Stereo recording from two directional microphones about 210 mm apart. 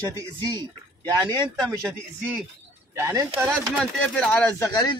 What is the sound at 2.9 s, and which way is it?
Speech, 15° right (ahead or behind).